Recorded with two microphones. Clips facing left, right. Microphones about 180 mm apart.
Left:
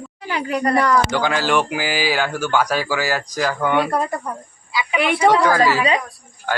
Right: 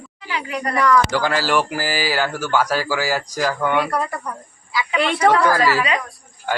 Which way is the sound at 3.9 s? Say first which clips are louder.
Left 2 dB; 25° left (ahead or behind).